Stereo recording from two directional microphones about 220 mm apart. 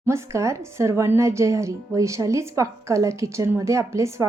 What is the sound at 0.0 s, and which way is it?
Speech, 10° right (ahead or behind).